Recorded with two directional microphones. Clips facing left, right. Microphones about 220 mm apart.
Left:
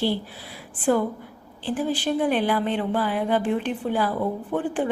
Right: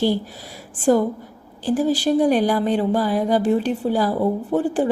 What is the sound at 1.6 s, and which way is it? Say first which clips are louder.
Speech: right 6 dB; 40° right (ahead or behind).